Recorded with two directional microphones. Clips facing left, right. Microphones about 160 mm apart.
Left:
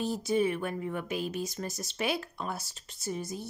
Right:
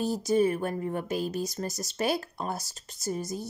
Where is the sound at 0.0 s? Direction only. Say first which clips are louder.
Right 3 dB; 40° right (ahead or behind).